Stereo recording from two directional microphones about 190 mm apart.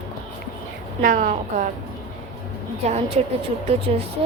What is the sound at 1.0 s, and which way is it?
Speech, 40° right (ahead or behind).